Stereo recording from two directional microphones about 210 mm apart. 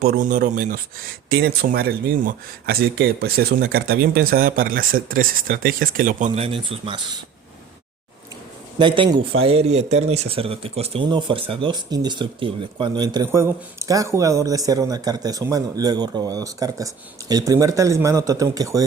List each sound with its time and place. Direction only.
0.0 s speech: 45° right (ahead or behind); by 7.2 s 25° right (ahead or behind)
8.8 s a man's voice: 25° right (ahead or behind)